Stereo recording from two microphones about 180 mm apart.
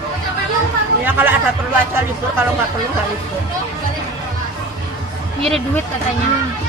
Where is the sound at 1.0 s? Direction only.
10° right (ahead or behind).